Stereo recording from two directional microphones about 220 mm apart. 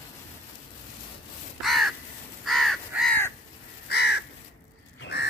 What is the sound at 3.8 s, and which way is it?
Crow, 50° left (ahead or behind).